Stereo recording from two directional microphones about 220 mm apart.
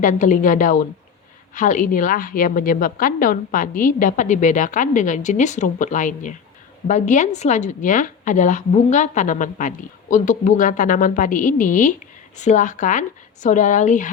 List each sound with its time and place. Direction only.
0.0 s a woman's voice: 35° left (ahead or behind)